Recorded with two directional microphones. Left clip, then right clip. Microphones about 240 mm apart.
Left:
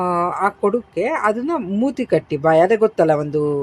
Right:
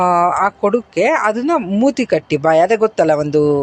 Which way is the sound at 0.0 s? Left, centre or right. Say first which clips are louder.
Right 6 dB; centre.